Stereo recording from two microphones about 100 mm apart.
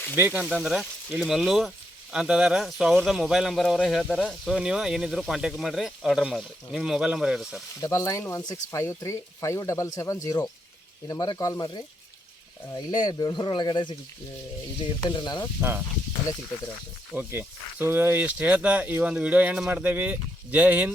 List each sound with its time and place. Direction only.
0.2 s speech: 20° right (ahead or behind)
0.4 s speech: 5° right (ahead or behind)
7.8 s speech: 35° left (ahead or behind)
17.2 s speech: 20° right (ahead or behind)